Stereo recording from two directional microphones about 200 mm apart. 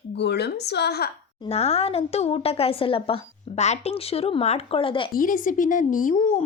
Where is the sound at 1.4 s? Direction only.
30° left (ahead or behind).